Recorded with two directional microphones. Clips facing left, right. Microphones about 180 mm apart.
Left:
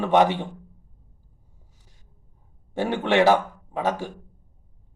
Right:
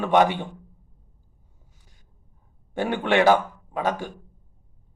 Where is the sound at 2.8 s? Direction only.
25° left (ahead or behind).